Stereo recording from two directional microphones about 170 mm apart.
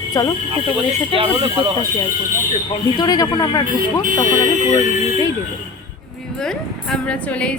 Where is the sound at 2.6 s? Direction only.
25° left (ahead or behind).